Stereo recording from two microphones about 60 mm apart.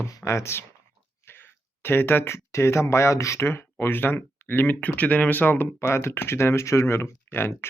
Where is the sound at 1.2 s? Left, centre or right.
Left.